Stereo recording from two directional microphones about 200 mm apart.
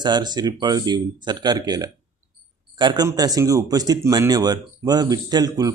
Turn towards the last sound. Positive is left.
turn(degrees=-20)  # may be behind; listen again after turning